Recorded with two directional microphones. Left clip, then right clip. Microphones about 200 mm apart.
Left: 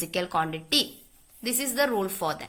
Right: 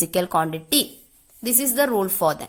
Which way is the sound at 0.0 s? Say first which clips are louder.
Right 6 dB; 55° right (ahead or behind).